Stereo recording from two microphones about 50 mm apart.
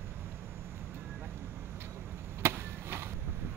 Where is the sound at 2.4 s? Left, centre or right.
Right.